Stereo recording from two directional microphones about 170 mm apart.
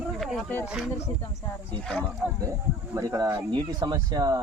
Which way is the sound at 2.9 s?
20° right (ahead or behind).